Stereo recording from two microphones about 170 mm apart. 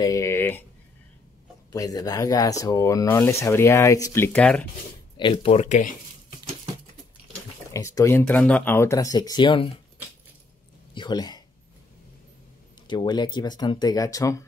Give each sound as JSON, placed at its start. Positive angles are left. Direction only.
{"t": 0.0, "sound": "speech", "side_deg": 20}
{"t": 1.7, "sound": "speech", "side_deg": 20}
{"t": 5.1, "sound": "speech", "side_deg": 30}
{"t": 7.7, "sound": "speech", "side_deg": 20}
{"t": 11.0, "sound": "speech", "side_deg": 25}
{"t": 12.8, "sound": "speech", "side_deg": 25}